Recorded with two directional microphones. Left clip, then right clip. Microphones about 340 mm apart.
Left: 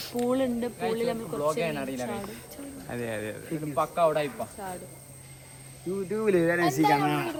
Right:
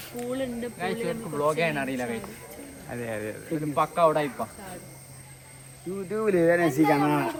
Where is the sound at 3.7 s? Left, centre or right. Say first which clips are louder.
Right 2 dB; right.